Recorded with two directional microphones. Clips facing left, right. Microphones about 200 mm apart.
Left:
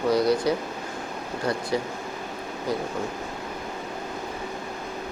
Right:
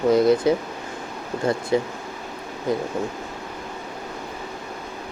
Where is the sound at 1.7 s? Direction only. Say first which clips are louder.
Right 7 dB; 20° right (ahead or behind).